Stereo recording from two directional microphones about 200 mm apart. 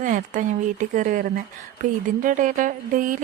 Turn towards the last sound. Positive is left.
turn(degrees=-40)  # may be behind; listen again after turning